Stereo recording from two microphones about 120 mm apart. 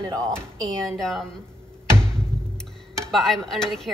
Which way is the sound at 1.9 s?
5° left (ahead or behind).